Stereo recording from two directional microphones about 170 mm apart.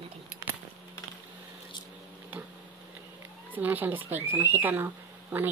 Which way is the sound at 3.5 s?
10° right (ahead or behind).